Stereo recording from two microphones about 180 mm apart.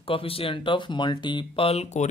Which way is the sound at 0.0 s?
30° left (ahead or behind).